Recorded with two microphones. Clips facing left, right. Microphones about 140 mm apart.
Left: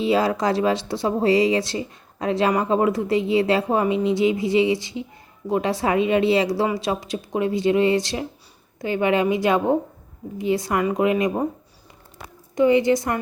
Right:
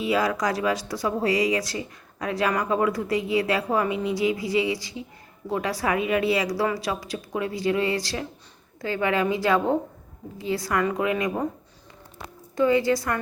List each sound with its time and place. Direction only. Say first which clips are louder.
0.0 s a woman's voice: left 4 dB; 25° left (ahead or behind)
12.5 s a woman's voice: left 4 dB; 20° left (ahead or behind)